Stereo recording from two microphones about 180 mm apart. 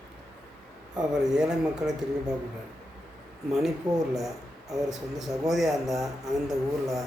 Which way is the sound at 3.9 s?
20° right (ahead or behind).